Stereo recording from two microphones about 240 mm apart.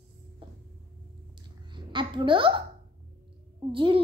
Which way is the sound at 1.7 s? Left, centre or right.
Centre.